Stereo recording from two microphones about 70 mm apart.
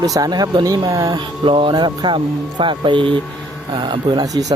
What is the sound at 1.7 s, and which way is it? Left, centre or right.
Speech, right.